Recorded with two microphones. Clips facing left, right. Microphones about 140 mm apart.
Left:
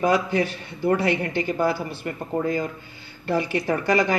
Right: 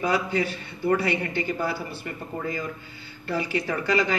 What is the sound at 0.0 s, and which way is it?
Speech, 45° left (ahead or behind).